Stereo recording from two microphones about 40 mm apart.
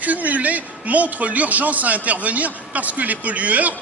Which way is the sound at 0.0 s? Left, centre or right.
Right.